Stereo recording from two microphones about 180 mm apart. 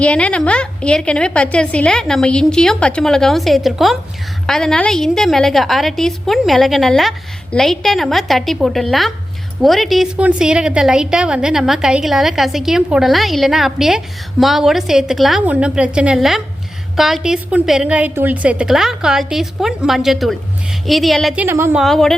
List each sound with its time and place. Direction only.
0.0 s a woman's voice: 5° left (ahead or behind)
21.4 s a woman's voice: 10° right (ahead or behind)
21.8 s a woman's voice: centre (ahead or behind)